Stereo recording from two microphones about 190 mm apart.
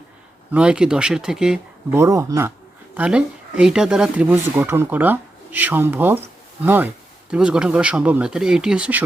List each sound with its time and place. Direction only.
0.5 s speech: 5° right (ahead or behind)
2.0 s speech: 15° right (ahead or behind)
2.9 s speech: 5° right (ahead or behind)